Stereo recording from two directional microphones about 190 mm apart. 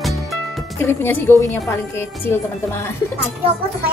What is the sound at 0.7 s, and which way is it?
A woman's voice, 10° left (ahead or behind).